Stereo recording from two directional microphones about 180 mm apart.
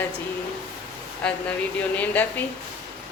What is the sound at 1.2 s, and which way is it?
Speech, 5° left (ahead or behind).